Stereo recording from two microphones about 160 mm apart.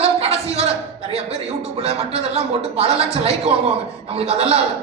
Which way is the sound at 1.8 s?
40° right (ahead or behind).